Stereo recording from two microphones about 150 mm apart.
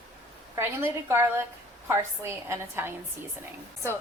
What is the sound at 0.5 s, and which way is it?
A woman's voice, 15° right (ahead or behind).